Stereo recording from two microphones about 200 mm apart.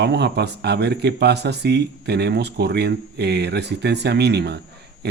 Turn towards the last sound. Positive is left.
turn(degrees=-55)  # may be behind; listen again after turning